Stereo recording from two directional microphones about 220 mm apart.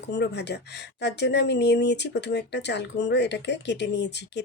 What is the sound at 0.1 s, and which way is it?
Speech, 50° left (ahead or behind).